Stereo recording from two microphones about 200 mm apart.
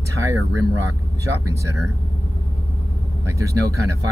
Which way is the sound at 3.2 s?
15° right (ahead or behind).